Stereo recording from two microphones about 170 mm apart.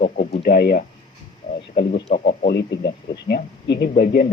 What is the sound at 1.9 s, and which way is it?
Speech, 40° left (ahead or behind).